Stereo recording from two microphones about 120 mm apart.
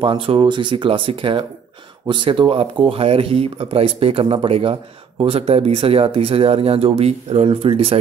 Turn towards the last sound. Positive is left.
turn(degrees=-50)  # may be behind; listen again after turning